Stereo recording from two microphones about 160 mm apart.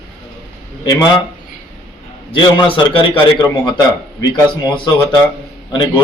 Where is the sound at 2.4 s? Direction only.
30° left (ahead or behind).